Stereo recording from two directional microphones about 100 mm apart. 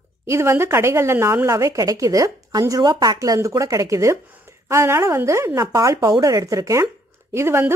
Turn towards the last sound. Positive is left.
turn(degrees=-25)  # may be behind; listen again after turning